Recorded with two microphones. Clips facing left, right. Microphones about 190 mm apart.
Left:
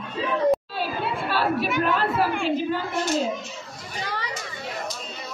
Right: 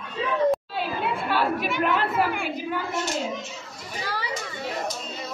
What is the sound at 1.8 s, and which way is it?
Speech, 20° right (ahead or behind).